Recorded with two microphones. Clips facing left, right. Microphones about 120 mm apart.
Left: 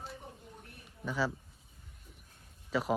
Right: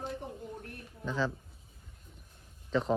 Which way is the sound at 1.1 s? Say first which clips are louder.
Right 1 dB; 10° left (ahead or behind).